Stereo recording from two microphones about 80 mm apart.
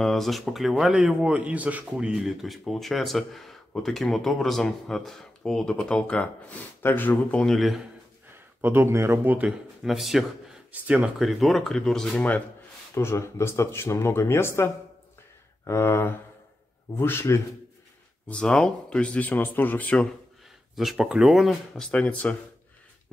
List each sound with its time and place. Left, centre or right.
0.0 s speech: centre; by 7.4 s left
7.4 s speech: centre
8.5 s speech: right
9.8 s speech: centre
10.7 s speech: right
11.1 s speech: centre
12.9 s speech: left
18.3 s speech: centre
20.7 s speech: centre
21.9 s speech: centre